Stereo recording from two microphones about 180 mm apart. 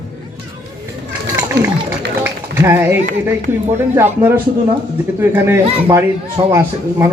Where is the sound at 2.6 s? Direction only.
15° right (ahead or behind).